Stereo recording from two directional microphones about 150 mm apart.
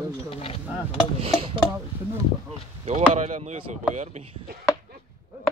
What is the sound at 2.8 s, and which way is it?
Speech, 45° right (ahead or behind).